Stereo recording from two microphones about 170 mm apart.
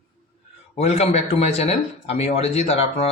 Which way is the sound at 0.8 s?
40° left (ahead or behind).